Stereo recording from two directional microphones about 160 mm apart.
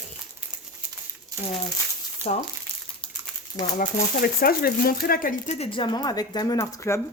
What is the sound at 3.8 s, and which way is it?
Speech, 70° left (ahead or behind).